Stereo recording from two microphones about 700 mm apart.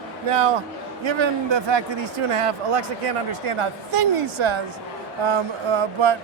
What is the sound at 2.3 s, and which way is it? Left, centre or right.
A woman's voice, right.